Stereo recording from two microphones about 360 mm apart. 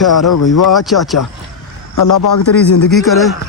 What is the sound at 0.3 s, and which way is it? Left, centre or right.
Speech, left.